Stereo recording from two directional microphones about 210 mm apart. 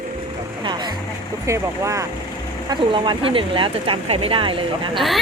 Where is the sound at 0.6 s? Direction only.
20° right (ahead or behind).